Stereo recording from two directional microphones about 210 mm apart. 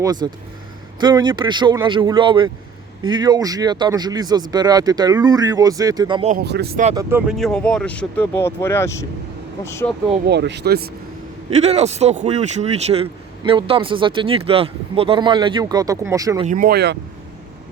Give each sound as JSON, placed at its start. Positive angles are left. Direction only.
{"t": 0.0, "sound": "speech", "side_deg": -20}
{"t": 6.3, "sound": "speech", "side_deg": -50}
{"t": 7.3, "sound": "speech", "side_deg": 0}
{"t": 10.2, "sound": "speech", "side_deg": -55}
{"t": 11.5, "sound": "speech", "side_deg": -30}
{"t": 16.5, "sound": "speech", "side_deg": -45}